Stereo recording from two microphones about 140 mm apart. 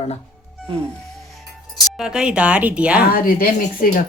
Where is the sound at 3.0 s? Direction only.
90° left.